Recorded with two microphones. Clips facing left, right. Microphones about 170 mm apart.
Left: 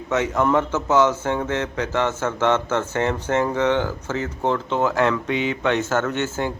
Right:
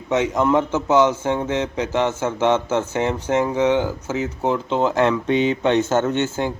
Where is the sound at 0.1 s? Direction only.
20° right (ahead or behind).